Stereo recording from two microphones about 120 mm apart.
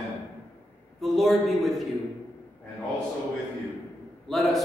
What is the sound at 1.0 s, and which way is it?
Speech, centre (ahead or behind).